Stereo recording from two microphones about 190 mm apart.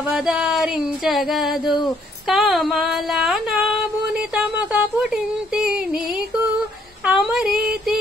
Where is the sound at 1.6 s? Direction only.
25° left (ahead or behind).